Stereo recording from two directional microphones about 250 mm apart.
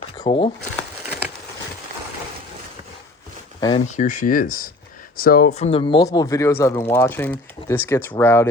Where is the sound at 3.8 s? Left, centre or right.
Left; by 8.5 s centre.